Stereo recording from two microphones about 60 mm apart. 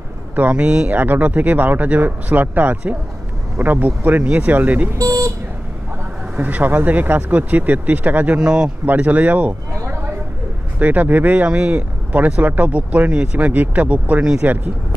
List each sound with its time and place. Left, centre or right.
0.4 s speech: right
4.9 s speech: right
6.3 s speech: right
8.4 s speech: centre
8.8 s speech: right